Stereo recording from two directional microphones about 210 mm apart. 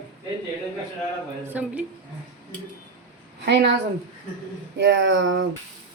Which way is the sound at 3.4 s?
50° right (ahead or behind).